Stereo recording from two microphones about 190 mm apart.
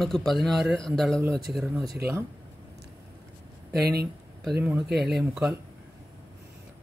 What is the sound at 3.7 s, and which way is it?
Speech, 55° right (ahead or behind).